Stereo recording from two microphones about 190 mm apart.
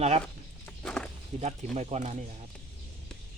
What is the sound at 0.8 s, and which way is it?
Walk, 5° left (ahead or behind).